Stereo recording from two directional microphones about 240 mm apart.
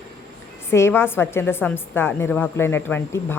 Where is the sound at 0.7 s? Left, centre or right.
Centre.